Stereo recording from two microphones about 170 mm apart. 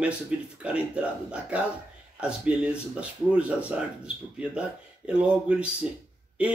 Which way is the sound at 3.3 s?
5° right (ahead or behind).